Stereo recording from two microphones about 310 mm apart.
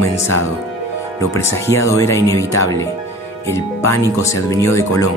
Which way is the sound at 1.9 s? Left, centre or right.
Centre.